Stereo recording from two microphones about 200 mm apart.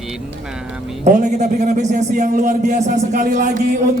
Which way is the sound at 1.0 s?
40° right (ahead or behind).